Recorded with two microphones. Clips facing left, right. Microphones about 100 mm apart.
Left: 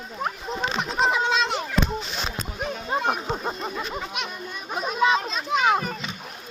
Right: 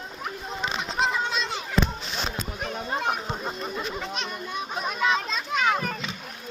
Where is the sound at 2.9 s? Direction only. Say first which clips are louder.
Left 3 dB; 20° left (ahead or behind).